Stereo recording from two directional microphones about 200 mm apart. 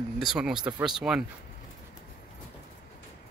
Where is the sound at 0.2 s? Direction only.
5° right (ahead or behind).